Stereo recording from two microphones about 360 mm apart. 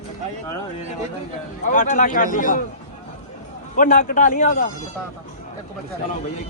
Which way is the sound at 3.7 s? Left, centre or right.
Left.